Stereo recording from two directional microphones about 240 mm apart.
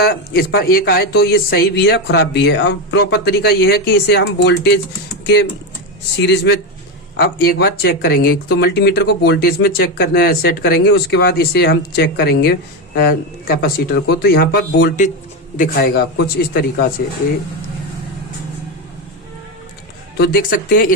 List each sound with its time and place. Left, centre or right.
0.0 s a man's voice: left
20.1 s speech: left